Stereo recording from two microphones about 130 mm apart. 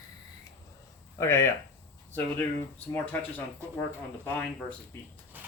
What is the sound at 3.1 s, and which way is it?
Speech, 10° left (ahead or behind).